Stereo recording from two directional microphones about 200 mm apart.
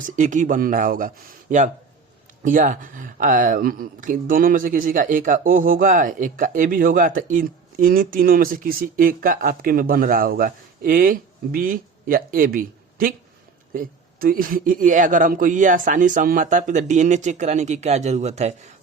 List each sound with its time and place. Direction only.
0.0 s a man's voice: 40° right (ahead or behind)